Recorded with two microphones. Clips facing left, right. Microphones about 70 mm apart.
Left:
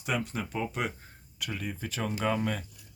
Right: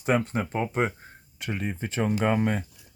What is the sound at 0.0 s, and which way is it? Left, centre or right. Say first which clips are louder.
Speech: right 7 dB; right.